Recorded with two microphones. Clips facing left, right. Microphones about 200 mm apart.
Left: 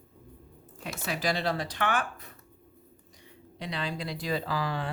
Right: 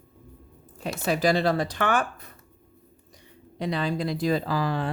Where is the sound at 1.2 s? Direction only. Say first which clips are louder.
Right 6 dB; 50° right (ahead or behind).